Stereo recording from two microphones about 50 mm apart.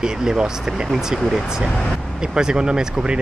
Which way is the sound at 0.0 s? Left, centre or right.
Centre.